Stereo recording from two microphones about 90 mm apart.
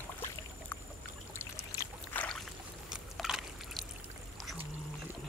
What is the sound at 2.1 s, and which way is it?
Boat, 20° left (ahead or behind).